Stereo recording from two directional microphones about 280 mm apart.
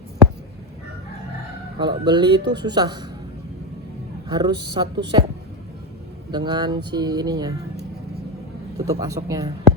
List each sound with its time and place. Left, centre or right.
1.8 s speech: centre
4.3 s speech: centre
6.3 s speech: centre
8.9 s speech: centre